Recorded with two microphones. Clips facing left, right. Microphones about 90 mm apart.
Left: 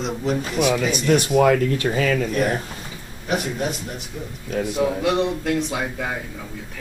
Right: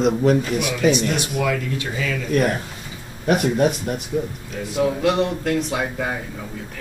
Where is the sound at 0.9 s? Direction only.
45° left (ahead or behind).